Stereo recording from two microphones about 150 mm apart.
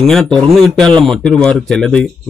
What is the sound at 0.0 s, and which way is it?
Speech, 5° left (ahead or behind).